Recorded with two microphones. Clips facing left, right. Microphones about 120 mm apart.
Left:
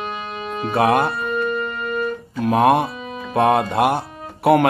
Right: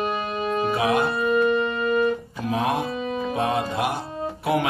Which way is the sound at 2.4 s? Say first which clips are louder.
Left 10 dB; 65° left (ahead or behind).